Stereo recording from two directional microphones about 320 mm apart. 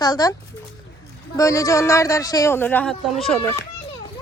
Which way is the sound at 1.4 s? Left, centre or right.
Centre.